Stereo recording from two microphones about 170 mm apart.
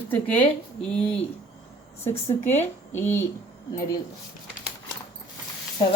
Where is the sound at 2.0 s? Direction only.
15° left (ahead or behind).